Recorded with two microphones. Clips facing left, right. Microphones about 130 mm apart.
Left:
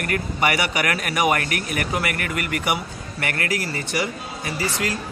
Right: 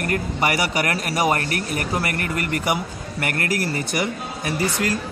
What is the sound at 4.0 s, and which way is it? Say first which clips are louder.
Speech: right 1 dB; 55° right (ahead or behind).